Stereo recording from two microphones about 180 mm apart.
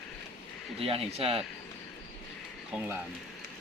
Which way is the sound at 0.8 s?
35° right (ahead or behind).